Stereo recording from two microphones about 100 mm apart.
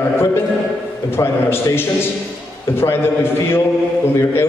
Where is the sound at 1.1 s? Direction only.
25° left (ahead or behind).